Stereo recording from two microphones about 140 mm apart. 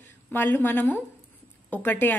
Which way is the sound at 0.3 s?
15° left (ahead or behind).